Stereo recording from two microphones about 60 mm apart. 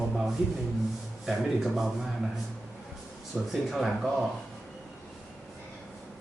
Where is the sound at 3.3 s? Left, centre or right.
Right.